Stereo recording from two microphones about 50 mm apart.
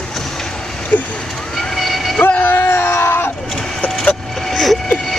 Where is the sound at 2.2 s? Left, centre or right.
Left.